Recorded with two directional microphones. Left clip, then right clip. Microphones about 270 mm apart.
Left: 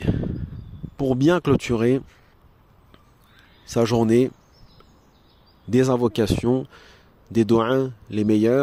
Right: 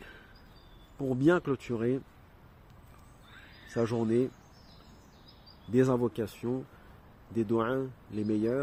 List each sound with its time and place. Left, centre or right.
0.9 s speech: left
3.8 s speech: left
5.7 s speech: left